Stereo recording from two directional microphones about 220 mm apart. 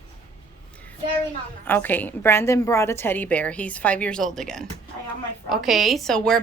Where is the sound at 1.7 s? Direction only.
10° left (ahead or behind).